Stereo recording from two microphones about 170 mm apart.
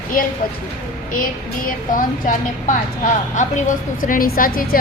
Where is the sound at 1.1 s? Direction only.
55° left (ahead or behind).